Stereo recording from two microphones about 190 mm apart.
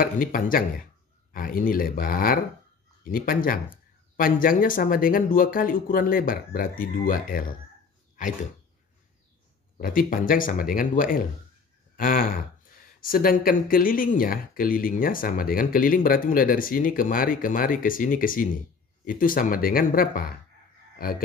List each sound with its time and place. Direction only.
0.0 s speech: 50° left (ahead or behind)
9.8 s speech: 50° left (ahead or behind)